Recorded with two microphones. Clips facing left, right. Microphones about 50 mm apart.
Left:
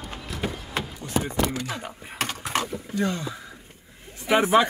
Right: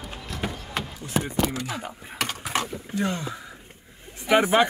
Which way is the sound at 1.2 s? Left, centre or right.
Centre.